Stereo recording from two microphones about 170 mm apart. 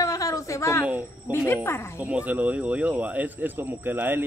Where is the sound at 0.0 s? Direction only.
20° left (ahead or behind).